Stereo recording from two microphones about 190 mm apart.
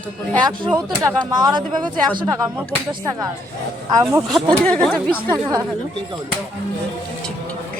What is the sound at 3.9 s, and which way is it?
Speech, 20° right (ahead or behind).